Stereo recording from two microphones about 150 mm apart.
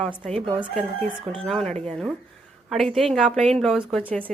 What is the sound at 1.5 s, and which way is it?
Speech, 5° left (ahead or behind).